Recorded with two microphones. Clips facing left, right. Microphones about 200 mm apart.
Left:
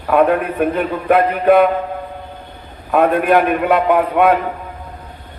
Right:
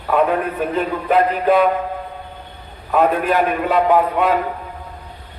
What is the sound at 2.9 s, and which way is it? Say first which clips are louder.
A man's voice: left 3 dB; 60° left (ahead or behind).